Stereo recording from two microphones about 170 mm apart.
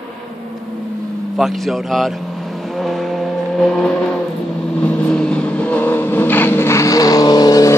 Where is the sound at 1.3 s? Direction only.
Centre (ahead or behind).